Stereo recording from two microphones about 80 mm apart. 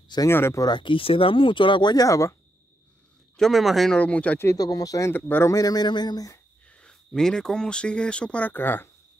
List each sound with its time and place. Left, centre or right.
0.3 s speech: left
0.6 s speech: left
2.0 s speech: left
3.3 s speech: centre
3.9 s speech: centre
4.6 s speech: left
5.1 s speech: left
5.5 s speech: left
6.7 s speech: centre